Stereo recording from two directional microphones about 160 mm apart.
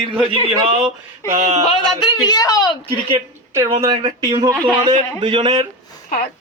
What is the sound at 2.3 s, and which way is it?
Speech, 20° left (ahead or behind).